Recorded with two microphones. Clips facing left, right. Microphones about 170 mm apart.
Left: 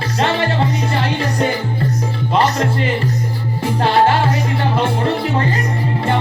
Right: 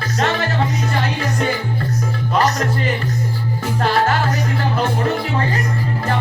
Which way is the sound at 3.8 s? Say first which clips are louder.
Left 4 dB; 30° left (ahead or behind).